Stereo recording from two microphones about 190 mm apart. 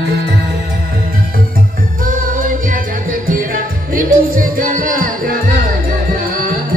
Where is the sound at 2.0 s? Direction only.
45° right (ahead or behind).